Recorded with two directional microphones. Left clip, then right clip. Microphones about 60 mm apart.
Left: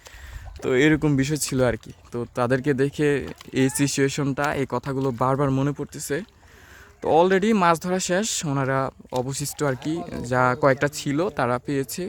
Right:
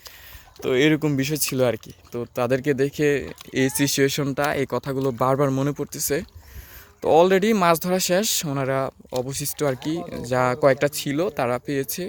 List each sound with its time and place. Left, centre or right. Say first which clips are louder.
0.6 s speech: even; left
3.8 s speech: right 2 dB; centre
5.7 s speech: right 3 dB; right
7.0 s speech: right 2 dB; centre
8.4 s speech: even; centre
9.8 s speech: right 1 dB; centre
11.2 s speech: even; left